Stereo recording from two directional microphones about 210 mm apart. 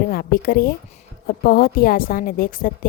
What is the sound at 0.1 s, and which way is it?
Speech, 45° left (ahead or behind).